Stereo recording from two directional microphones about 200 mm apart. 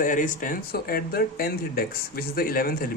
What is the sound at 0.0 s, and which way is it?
Speech, 40° left (ahead or behind).